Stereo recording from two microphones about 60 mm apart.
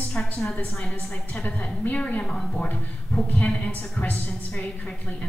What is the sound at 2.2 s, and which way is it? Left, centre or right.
Speech, centre.